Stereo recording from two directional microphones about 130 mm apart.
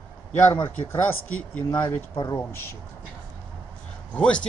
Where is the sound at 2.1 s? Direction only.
30° left (ahead or behind).